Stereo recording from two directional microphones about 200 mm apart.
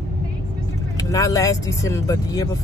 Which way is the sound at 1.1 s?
15° left (ahead or behind).